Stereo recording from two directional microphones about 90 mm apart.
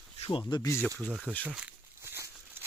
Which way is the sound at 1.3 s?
15° right (ahead or behind).